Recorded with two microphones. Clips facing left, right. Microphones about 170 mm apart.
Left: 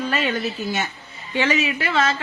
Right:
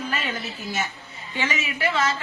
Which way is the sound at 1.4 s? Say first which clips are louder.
Left 5 dB; 65° left (ahead or behind).